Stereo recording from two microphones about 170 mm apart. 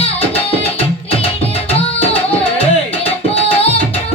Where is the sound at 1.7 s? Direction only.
35° left (ahead or behind).